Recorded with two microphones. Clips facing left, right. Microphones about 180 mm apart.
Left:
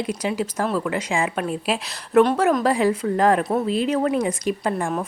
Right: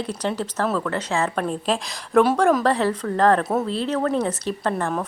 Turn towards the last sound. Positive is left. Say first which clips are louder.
# left 1 dB
turn(degrees=10)  # may be behind; listen again after turning